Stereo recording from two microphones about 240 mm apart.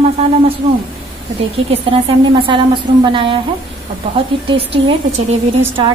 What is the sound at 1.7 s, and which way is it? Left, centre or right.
A woman's voice, right.